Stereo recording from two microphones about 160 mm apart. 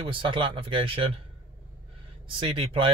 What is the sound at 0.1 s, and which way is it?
Speech, 30° right (ahead or behind).